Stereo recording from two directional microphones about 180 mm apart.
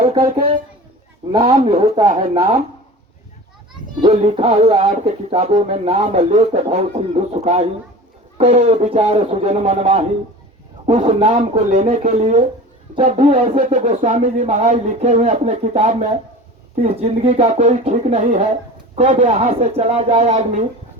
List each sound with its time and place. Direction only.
0.0 s speech: 30° right (ahead or behind)
4.0 s speech: 35° right (ahead or behind)